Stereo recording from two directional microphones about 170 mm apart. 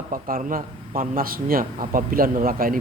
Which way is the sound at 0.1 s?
55° right (ahead or behind).